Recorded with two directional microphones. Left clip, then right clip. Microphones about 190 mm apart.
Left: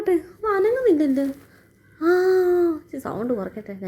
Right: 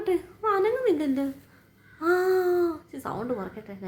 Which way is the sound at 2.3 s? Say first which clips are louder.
Left 5 dB; 15° left (ahead or behind).